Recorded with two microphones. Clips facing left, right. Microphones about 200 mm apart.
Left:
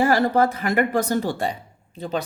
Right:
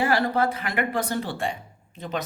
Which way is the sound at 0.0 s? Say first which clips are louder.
Left 4 dB; 45° left (ahead or behind).